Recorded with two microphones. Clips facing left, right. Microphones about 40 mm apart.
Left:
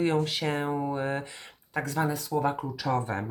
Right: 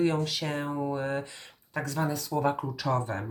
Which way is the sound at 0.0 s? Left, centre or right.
Left.